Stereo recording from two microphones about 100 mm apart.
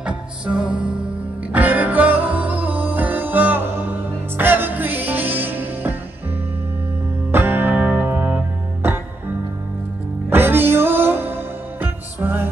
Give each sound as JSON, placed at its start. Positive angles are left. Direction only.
{"t": 0.0, "sound": "music", "side_deg": -10}
{"t": 7.2, "sound": "music", "side_deg": -20}
{"t": 10.3, "sound": "music", "side_deg": -20}